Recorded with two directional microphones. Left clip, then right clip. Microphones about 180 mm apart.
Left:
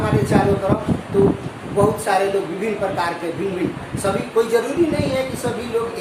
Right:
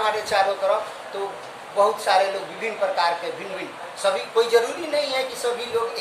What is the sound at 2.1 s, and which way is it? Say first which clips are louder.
Speech: right 1 dB; 10° left (ahead or behind).